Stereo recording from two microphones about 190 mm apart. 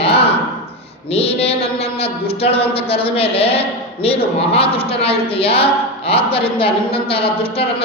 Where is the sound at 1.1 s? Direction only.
30° left (ahead or behind).